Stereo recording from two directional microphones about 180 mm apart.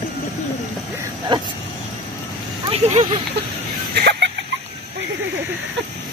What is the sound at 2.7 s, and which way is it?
Speech, 40° right (ahead or behind).